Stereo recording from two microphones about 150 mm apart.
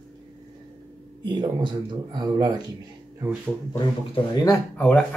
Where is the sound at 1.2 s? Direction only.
30° right (ahead or behind).